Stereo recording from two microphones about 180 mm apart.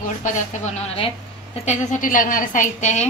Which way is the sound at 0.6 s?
35° left (ahead or behind).